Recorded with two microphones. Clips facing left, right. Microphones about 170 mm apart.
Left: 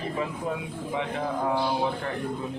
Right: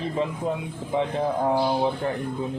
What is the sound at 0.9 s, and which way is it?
Speech, 30° right (ahead or behind).